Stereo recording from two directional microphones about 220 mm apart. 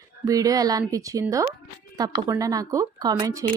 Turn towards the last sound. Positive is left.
turn(degrees=-15)  # may be behind; listen again after turning